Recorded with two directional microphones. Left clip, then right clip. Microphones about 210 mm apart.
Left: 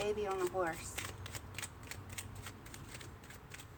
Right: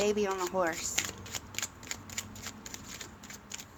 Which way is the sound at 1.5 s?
25° right (ahead or behind).